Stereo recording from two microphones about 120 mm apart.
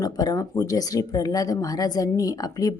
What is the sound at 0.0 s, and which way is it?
Speech, 30° left (ahead or behind).